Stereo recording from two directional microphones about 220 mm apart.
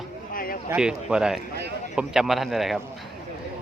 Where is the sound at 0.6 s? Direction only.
5° right (ahead or behind).